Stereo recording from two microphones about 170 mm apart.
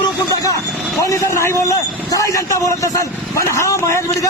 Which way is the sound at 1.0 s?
20° left (ahead or behind).